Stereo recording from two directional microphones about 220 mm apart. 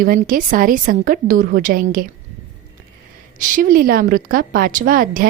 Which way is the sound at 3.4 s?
35° right (ahead or behind).